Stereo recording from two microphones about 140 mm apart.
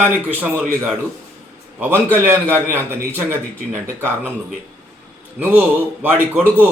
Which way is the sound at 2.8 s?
15° right (ahead or behind).